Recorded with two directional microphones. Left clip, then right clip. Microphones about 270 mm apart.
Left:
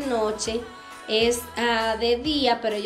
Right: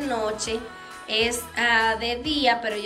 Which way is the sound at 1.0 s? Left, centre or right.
Centre.